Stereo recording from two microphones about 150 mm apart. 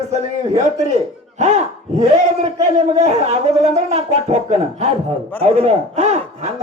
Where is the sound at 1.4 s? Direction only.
50° right (ahead or behind).